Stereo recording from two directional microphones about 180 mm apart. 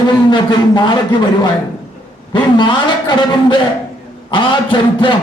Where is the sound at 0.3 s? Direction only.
25° left (ahead or behind).